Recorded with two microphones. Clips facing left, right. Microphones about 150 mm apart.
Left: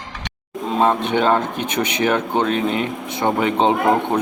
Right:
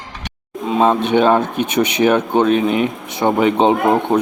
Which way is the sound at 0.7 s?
15° right (ahead or behind).